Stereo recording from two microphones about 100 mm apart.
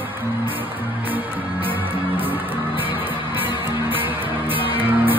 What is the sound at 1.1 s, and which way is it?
Music, 20° right (ahead or behind).